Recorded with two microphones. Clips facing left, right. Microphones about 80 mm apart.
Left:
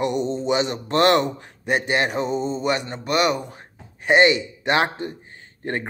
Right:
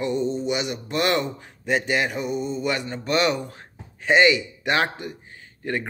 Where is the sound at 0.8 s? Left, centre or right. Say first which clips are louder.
Left 6 dB; left.